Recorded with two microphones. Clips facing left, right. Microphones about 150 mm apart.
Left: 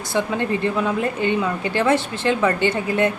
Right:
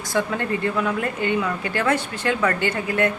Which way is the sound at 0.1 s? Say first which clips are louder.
Left 2 dB; 20° left (ahead or behind).